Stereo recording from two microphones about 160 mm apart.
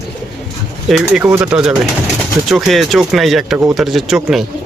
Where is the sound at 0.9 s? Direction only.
5° right (ahead or behind).